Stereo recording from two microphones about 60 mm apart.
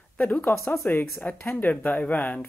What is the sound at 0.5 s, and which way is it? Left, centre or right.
Speech, left.